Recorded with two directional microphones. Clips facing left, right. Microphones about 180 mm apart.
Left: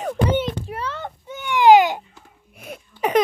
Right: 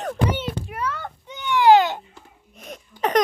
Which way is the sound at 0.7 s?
30° left (ahead or behind).